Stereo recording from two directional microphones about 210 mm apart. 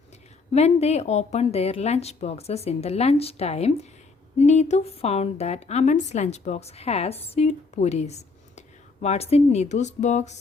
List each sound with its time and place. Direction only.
0.5 s a woman's voice: 30° left (ahead or behind)